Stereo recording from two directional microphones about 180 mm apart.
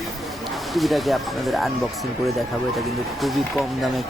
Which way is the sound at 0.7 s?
Centre (ahead or behind).